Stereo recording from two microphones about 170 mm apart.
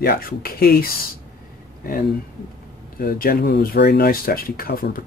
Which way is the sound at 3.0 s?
60° left (ahead or behind).